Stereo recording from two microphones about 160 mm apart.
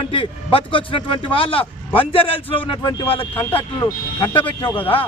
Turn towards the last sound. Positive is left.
turn(degrees=35)  # may be behind; listen again after turning